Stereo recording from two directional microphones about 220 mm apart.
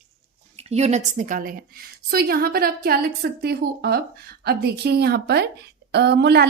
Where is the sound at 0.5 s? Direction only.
30° right (ahead or behind).